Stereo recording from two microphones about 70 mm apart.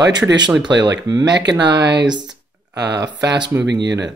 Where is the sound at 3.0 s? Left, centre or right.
Right.